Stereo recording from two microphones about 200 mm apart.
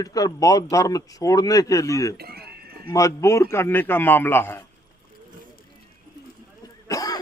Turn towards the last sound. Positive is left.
turn(degrees=20)  # may be behind; listen again after turning